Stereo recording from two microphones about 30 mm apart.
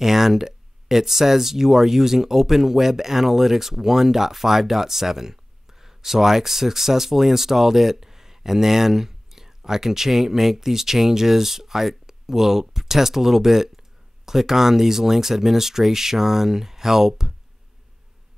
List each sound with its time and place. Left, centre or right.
0.0 s speech: centre